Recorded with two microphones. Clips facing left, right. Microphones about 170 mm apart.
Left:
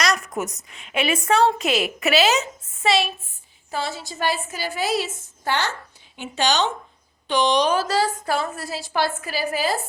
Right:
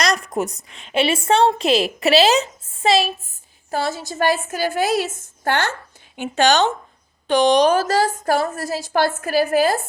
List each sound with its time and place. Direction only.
0.0 s a woman's voice: 35° right (ahead or behind); by 9.7 s 50° right (ahead or behind)